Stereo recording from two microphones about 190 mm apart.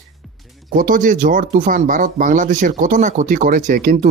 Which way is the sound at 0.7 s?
45° right (ahead or behind).